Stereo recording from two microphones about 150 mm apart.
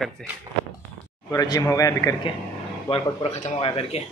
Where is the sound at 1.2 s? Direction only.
25° left (ahead or behind).